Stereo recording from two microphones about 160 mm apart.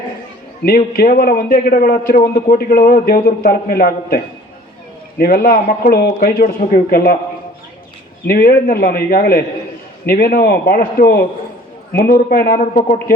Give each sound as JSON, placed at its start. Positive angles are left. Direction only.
{"t": 0.6, "sound": "a man's voice", "side_deg": 70}
{"t": 8.3, "sound": "a man's voice", "side_deg": 70}
{"t": 11.9, "sound": "a man's voice", "side_deg": 65}